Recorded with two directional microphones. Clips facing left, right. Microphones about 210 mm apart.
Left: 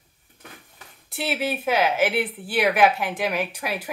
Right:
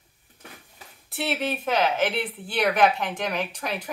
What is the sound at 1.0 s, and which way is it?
Speech, centre (ahead or behind).